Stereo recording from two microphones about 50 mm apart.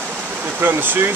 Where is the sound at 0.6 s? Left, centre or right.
Right.